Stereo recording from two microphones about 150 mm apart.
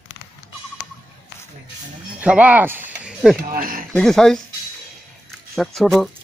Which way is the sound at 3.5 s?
70° right (ahead or behind).